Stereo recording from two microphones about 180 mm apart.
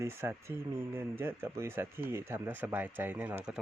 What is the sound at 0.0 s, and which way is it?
Speech, 15° right (ahead or behind).